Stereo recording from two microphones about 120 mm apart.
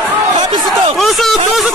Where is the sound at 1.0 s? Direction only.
Centre (ahead or behind).